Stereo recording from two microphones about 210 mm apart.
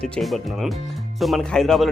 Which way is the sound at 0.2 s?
Centre (ahead or behind).